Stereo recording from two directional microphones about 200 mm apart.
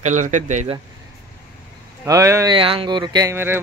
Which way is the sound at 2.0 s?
15° right (ahead or behind).